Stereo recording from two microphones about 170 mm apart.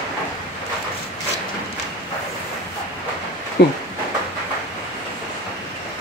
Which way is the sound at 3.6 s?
75° left (ahead or behind).